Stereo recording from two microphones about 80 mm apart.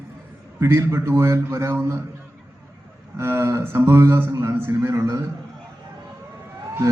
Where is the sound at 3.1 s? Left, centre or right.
Right.